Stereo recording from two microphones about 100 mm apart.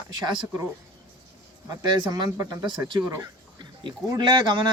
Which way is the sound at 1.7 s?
40° right (ahead or behind).